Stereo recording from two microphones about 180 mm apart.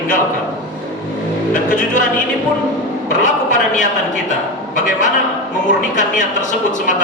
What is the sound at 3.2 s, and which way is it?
Speech, 45° left (ahead or behind).